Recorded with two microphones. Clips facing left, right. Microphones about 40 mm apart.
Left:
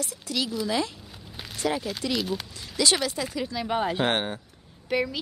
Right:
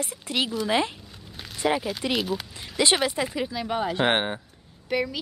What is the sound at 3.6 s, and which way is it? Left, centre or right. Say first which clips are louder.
Speech: left 1 dB; centre.